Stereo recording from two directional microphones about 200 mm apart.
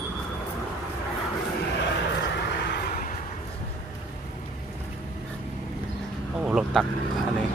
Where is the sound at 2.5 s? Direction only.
60° left (ahead or behind).